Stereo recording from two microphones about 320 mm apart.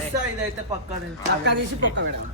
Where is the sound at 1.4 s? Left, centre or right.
Right.